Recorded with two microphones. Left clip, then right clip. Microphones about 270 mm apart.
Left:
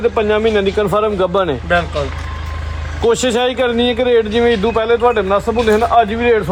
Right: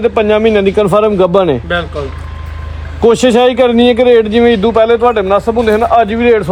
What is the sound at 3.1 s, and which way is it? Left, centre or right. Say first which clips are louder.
A man's voice: right 6 dB; right.